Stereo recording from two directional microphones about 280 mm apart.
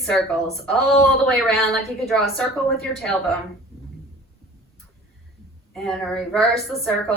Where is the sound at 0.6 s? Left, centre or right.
Centre.